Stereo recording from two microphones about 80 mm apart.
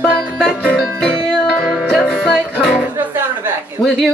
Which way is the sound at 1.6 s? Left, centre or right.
Centre.